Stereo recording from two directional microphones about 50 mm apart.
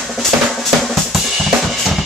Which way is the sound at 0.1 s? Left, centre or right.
Centre.